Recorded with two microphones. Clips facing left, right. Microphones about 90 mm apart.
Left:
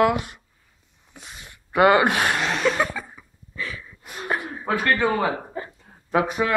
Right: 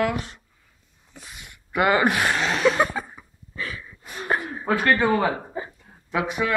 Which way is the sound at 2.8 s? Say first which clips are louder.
Right 2 dB; 20° right (ahead or behind).